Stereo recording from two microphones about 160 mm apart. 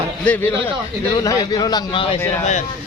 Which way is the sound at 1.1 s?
25° left (ahead or behind).